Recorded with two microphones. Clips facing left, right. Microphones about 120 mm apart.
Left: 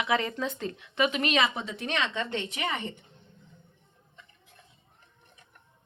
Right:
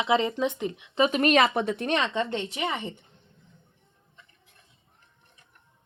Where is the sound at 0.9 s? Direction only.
30° right (ahead or behind).